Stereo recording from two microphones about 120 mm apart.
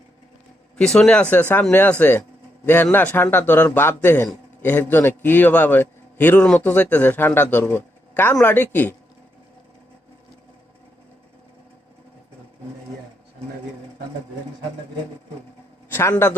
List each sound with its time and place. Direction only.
0.8 s a man's voice: 5° left (ahead or behind)
15.9 s a man's voice: 20° left (ahead or behind)